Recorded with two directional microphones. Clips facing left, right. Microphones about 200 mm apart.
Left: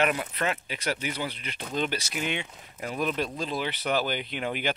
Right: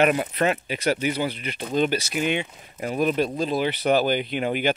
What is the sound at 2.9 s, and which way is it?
Speech, 40° right (ahead or behind).